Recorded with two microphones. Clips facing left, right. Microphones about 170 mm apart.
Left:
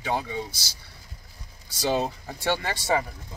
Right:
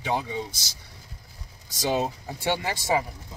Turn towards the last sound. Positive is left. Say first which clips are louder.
# even
turn(degrees=-15)  # may be behind; listen again after turning